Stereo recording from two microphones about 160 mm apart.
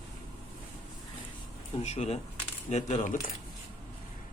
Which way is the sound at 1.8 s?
45° left (ahead or behind).